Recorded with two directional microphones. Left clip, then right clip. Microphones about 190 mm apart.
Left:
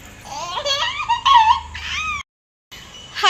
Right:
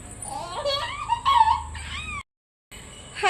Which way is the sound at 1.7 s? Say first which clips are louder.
Left 10 dB; 10° right (ahead or behind).